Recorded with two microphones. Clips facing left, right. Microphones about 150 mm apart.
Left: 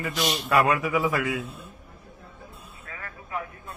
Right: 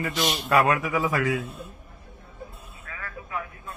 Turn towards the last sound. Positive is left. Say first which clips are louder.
# even
turn(degrees=30)  # may be behind; listen again after turning